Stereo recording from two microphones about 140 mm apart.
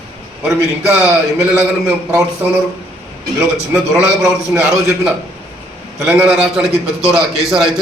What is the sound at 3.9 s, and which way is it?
Speech, 5° right (ahead or behind).